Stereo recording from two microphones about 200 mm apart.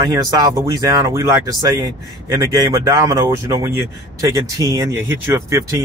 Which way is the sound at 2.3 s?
15° right (ahead or behind).